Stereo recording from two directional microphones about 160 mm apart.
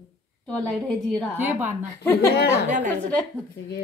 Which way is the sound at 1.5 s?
15° right (ahead or behind).